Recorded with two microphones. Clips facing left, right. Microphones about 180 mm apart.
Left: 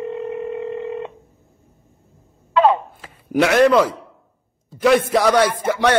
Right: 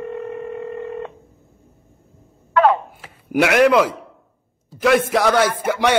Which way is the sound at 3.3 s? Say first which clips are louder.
Even; 5° right (ahead or behind).